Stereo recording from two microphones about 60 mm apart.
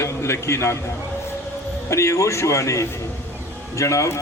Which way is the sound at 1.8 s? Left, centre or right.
Left.